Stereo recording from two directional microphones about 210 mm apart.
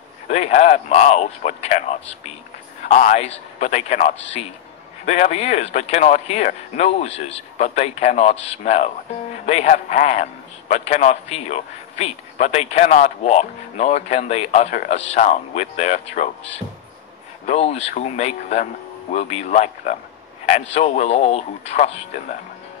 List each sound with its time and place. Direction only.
0.3 s a man's voice: 30° left (ahead or behind)
17.5 s a man's voice: 30° left (ahead or behind)